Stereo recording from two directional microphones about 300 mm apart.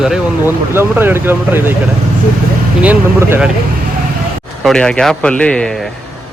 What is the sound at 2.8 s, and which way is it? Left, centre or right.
Speech, centre.